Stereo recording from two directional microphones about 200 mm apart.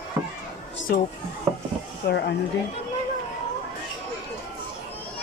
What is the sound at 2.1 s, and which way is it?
Speech, 55° left (ahead or behind).